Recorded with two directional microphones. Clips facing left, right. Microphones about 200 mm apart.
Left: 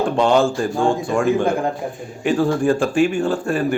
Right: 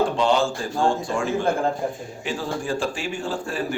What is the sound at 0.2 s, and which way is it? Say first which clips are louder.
Speech: left 5 dB; 55° left (ahead or behind).